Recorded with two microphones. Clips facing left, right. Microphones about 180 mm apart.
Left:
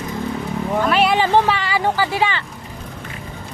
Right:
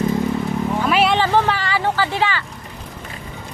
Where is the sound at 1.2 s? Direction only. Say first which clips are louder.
Left 1 dB; 15° left (ahead or behind).